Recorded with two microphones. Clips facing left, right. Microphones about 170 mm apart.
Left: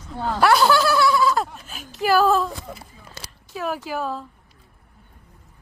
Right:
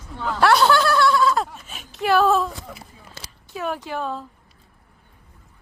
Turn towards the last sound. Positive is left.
turn(degrees=5)  # may be behind; listen again after turning